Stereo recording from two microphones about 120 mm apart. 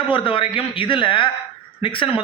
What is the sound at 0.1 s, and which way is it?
A man's voice, 45° left (ahead or behind).